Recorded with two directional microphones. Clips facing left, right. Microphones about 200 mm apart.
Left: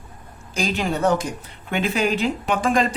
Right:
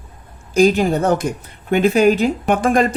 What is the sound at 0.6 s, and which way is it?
Speech, 40° right (ahead or behind).